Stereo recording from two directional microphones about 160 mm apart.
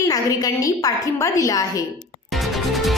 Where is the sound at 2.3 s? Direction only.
Centre (ahead or behind).